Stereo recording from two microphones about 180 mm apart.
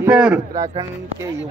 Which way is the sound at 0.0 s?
10° right (ahead or behind).